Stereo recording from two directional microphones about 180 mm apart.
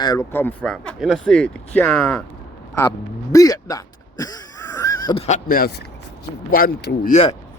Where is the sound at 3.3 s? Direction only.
20° left (ahead or behind).